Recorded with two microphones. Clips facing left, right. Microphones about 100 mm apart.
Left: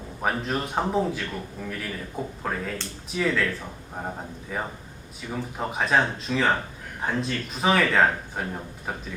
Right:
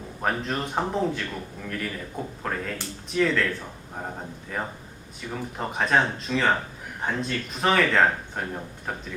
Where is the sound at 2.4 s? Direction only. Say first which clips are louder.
Even; 5° left (ahead or behind).